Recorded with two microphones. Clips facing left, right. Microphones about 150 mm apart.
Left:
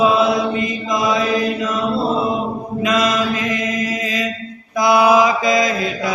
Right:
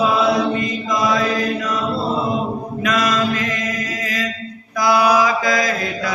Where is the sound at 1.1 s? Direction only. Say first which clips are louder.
Left 2 dB; 20° left (ahead or behind).